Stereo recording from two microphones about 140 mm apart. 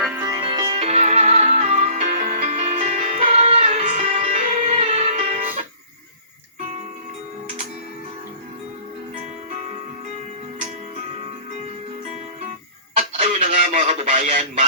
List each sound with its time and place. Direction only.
0.3 s music: 35° right (ahead or behind)
0.8 s music: 50° right (ahead or behind)
13.0 s fowl: 55° right (ahead or behind)